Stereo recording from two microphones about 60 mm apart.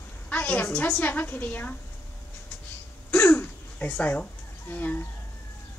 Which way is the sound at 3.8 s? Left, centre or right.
Left.